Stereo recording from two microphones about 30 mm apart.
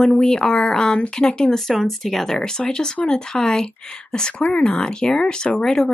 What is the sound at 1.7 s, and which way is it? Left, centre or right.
Speech, centre.